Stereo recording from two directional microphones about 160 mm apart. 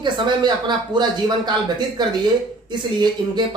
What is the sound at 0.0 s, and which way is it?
Speech, 30° right (ahead or behind).